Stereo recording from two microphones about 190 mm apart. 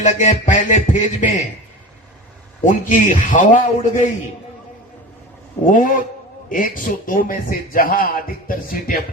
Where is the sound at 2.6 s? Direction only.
40° left (ahead or behind).